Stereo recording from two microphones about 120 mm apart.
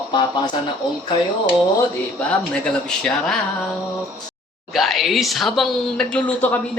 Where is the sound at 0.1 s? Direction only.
40° left (ahead or behind).